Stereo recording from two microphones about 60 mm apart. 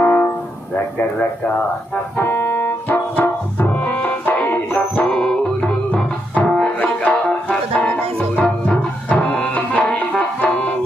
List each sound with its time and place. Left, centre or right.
0.0 s music: left
2.1 s music: left
5.0 s music: centre